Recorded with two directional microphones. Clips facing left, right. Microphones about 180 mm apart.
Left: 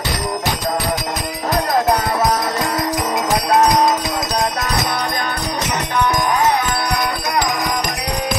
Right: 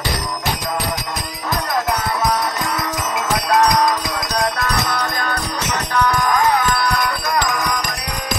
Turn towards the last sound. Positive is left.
turn(degrees=20)  # may be behind; listen again after turning